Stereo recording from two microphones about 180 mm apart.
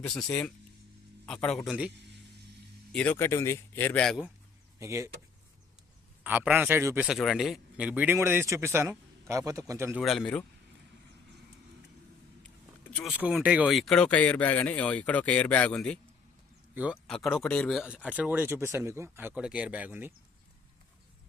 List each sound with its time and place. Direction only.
0.0 s a man's voice: 5° left (ahead or behind)
2.9 s speech: 10° left (ahead or behind)
4.8 s speech: 15° right (ahead or behind)
6.2 s speech: 10° right (ahead or behind)
10.0 s a man's voice: centre (ahead or behind)
12.4 s vehicle: 5° left (ahead or behind)
13.1 s speech: 5° right (ahead or behind)
16.7 s speech: 5° right (ahead or behind)